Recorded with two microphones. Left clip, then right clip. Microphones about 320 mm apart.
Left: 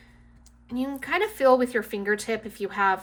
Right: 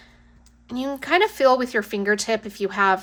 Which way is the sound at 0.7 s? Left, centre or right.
Centre.